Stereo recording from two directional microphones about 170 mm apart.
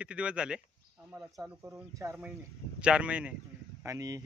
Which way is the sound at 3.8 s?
20° right (ahead or behind).